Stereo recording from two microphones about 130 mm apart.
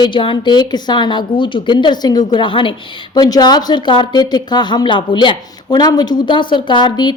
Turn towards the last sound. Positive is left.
turn(degrees=35)  # may be behind; listen again after turning